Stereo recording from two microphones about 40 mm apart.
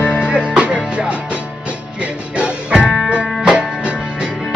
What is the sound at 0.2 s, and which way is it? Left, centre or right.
Music, right.